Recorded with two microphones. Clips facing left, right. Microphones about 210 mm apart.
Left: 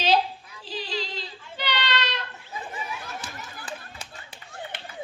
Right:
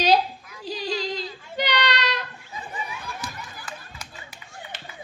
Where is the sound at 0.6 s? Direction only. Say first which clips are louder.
Right 4 dB; 45° right (ahead or behind).